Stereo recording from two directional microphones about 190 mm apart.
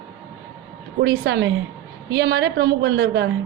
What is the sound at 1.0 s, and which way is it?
A woman's voice, 65° right (ahead or behind).